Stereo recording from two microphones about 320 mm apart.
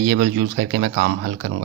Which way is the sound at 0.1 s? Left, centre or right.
Right.